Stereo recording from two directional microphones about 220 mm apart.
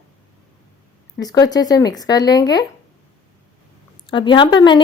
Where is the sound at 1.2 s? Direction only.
15° left (ahead or behind).